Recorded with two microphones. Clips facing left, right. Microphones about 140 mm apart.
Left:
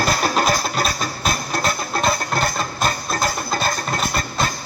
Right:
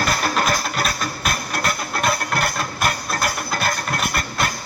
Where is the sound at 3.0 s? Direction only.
25° left (ahead or behind).